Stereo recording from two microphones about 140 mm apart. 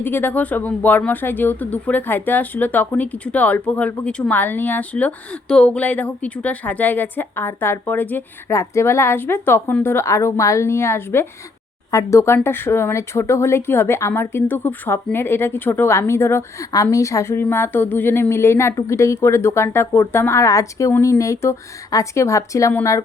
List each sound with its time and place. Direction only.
0.0 s speech: 15° left (ahead or behind)